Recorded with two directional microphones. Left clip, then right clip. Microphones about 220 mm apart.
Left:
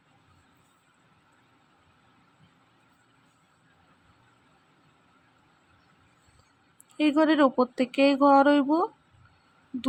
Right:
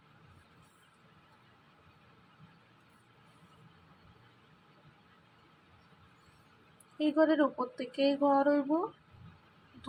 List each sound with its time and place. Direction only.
7.0 s speech: 35° left (ahead or behind)